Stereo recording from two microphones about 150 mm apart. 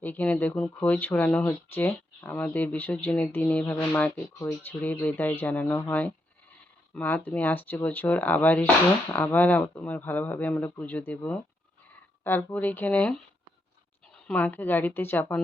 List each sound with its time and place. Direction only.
0.0 s speech: 15° left (ahead or behind)
4.4 s speech: 20° left (ahead or behind)
4.8 s speech: 10° left (ahead or behind)
6.9 s speech: 10° left (ahead or behind)